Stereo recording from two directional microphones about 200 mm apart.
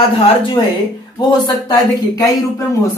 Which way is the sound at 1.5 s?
20° left (ahead or behind).